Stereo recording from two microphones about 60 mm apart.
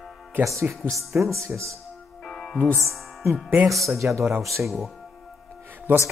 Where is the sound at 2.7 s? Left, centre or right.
Right.